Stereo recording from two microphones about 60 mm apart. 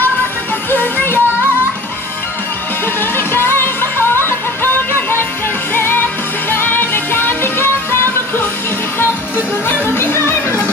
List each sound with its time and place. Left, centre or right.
0.7 s music: left
3.0 s music: left
5.8 s music: left
9.7 s music: left